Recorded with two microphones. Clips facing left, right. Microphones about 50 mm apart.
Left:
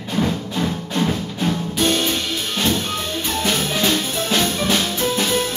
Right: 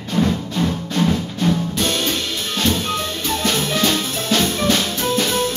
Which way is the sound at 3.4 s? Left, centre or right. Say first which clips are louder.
Right 1 dB; centre.